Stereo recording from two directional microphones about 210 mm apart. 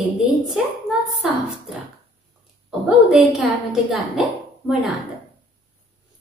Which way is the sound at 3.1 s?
Centre (ahead or behind).